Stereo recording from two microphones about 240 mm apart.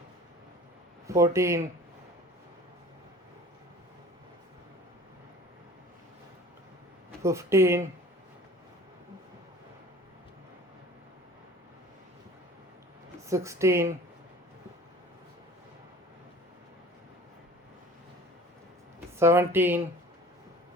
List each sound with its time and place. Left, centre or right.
1.0 s speech: centre
7.2 s speech: centre
13.2 s speech: centre
19.2 s speech: centre